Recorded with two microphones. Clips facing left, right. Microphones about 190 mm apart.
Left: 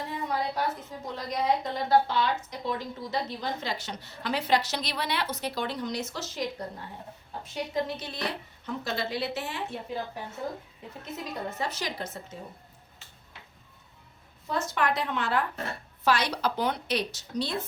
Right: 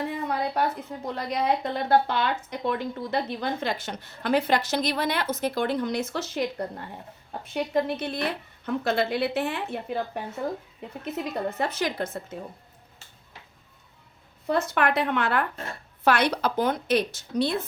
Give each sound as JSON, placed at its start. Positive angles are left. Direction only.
{"t": 0.0, "sound": "a woman's voice", "side_deg": -60}
{"t": 7.4, "sound": "a woman's voice", "side_deg": -60}
{"t": 11.0, "sound": "a woman's voice", "side_deg": -60}
{"t": 14.4, "sound": "a woman's voice", "side_deg": -60}